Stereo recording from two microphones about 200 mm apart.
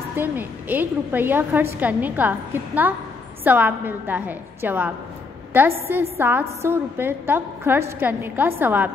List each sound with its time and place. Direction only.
0.1 s a woman's voice: 10° right (ahead or behind)